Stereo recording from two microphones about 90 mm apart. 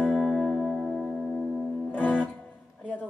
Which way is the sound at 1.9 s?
15° left (ahead or behind).